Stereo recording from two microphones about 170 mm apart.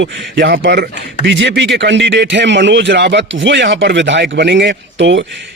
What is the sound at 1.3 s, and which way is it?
Speech, 90° right.